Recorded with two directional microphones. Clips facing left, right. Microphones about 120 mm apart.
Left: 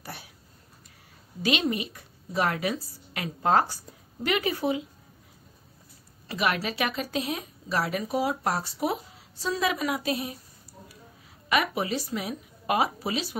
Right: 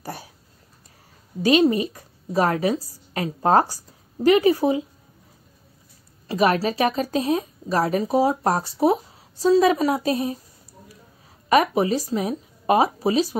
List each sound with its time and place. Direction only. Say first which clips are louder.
0.0 s a sound: right 7 dB; 40° right (ahead or behind)
1.4 s a woman's voice: right 9 dB; 35° right (ahead or behind)
6.2 s a woman's voice: right 8 dB; 40° right (ahead or behind)
11.4 s a woman's voice: right 8 dB; 35° right (ahead or behind)